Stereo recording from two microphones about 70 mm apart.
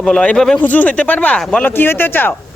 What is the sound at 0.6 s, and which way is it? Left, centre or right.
Speech, left.